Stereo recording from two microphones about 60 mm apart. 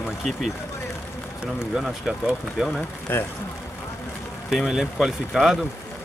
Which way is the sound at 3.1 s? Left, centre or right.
Left.